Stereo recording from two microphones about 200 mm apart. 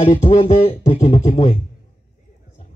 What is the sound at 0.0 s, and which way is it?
Speech, 35° left (ahead or behind).